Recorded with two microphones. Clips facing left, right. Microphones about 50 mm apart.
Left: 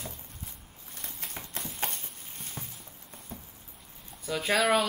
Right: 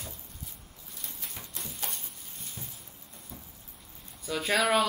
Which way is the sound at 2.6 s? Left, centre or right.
Left.